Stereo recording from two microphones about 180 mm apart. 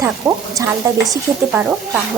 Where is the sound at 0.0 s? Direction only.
15° right (ahead or behind).